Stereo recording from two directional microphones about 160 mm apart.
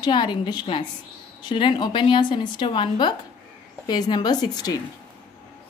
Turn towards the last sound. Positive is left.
turn(degrees=25)  # may be behind; listen again after turning